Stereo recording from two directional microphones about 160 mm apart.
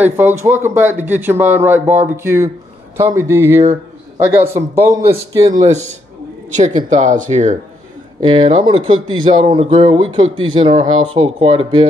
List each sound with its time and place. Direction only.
0.0 s speech: 10° right (ahead or behind)
6.9 s speech: 50° right (ahead or behind)
8.4 s speech: 30° right (ahead or behind)